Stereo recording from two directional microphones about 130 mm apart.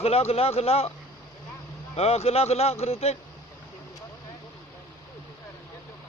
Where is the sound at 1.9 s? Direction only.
50° left (ahead or behind).